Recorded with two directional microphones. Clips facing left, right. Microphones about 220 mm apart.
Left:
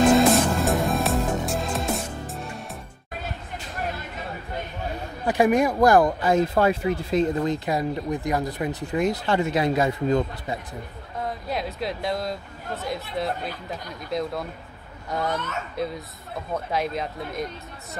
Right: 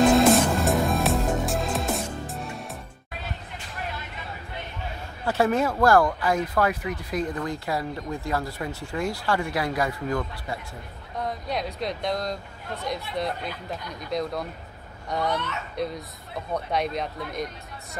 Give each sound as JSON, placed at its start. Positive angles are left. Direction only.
{"t": 0.0, "sound": "music", "side_deg": 0}
{"t": 5.2, "sound": "speech", "side_deg": 15}
{"t": 11.1, "sound": "speech", "side_deg": 0}
{"t": 15.3, "sound": "speech", "side_deg": 45}
{"t": 16.5, "sound": "speech", "side_deg": 0}